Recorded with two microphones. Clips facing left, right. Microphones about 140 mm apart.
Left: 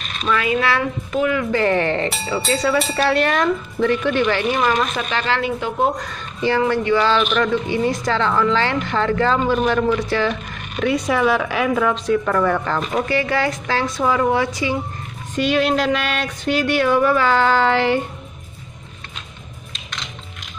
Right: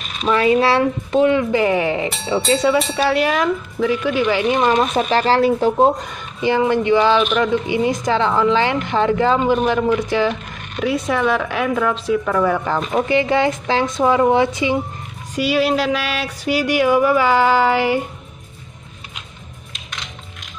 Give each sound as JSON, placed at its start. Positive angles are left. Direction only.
{"t": 0.3, "sound": "a woman's voice", "side_deg": -30}
{"t": 1.5, "sound": "speech", "side_deg": -10}
{"t": 2.0, "sound": "speech", "side_deg": 0}
{"t": 2.5, "sound": "a woman's voice", "side_deg": -20}
{"t": 2.8, "sound": "speech", "side_deg": 0}
{"t": 4.6, "sound": "a woman's voice", "side_deg": -25}
{"t": 5.1, "sound": "speech", "side_deg": -35}
{"t": 5.9, "sound": "speech", "side_deg": -15}
{"t": 10.8, "sound": "speech", "side_deg": 0}
{"t": 13.0, "sound": "a woman's voice", "side_deg": -20}
{"t": 15.3, "sound": "speech", "side_deg": -5}